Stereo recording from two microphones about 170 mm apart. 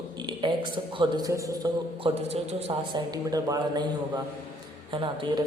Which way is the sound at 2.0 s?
35° right (ahead or behind).